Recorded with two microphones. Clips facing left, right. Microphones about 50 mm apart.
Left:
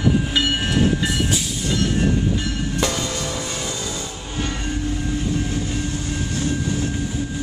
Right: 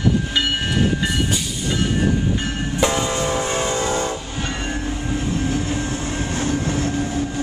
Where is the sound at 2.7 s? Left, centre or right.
Right.